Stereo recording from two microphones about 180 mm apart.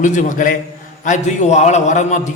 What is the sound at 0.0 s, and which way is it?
A man's voice, 45° left (ahead or behind).